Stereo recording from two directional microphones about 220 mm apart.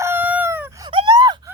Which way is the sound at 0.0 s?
10° right (ahead or behind).